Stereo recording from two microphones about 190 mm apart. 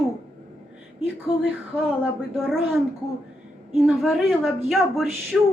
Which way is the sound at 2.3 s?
Centre (ahead or behind).